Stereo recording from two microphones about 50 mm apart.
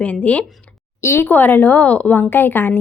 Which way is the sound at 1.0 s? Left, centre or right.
Left.